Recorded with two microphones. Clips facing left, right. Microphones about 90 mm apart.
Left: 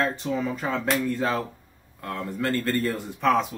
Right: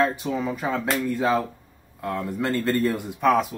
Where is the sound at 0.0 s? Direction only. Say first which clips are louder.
Right 2 dB; 10° right (ahead or behind).